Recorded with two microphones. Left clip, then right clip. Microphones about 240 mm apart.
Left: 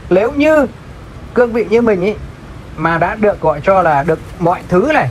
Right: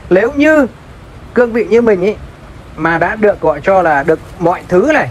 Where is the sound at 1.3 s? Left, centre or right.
Right.